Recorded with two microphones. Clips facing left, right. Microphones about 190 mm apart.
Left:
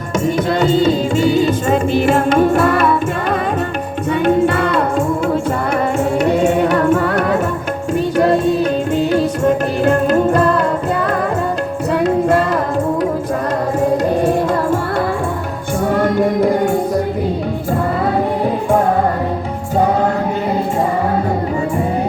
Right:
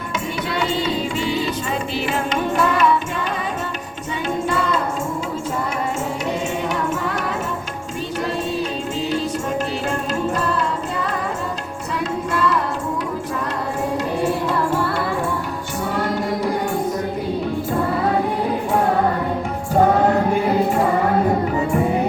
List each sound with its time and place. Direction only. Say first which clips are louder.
0.6 s music: left 8 dB; 45° left (ahead or behind)
4.3 s music: left 6 dB; 60° left (ahead or behind)
6.1 s music: left 10 dB; 60° left (ahead or behind)
9.0 s music: left 5 dB; 60° left (ahead or behind)
15.9 s music: left 7 dB; 55° left (ahead or behind)